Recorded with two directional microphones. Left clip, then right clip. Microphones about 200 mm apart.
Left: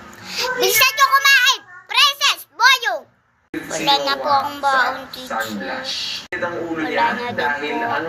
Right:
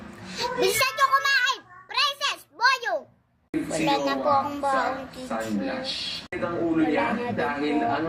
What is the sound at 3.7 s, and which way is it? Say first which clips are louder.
A woman's voice: left 7 dB; 20° right (ahead or behind).